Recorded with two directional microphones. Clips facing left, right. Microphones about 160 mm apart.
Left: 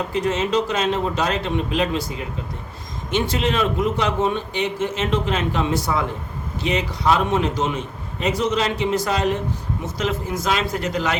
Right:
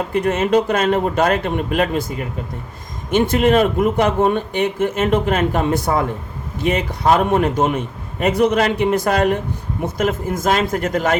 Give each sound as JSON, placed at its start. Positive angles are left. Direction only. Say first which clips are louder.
{"t": 0.1, "sound": "a man's voice", "louder": "right 6 dB", "side_deg": -55}